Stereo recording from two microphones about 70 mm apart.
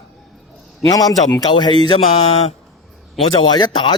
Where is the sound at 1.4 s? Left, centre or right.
Left.